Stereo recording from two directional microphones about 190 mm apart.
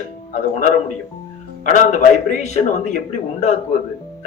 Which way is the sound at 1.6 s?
40° left (ahead or behind).